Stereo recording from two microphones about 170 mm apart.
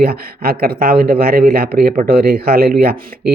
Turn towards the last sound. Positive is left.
turn(degrees=-65)  # may be behind; listen again after turning